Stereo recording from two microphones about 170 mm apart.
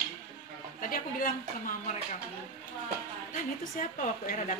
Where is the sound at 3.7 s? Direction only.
50° left (ahead or behind).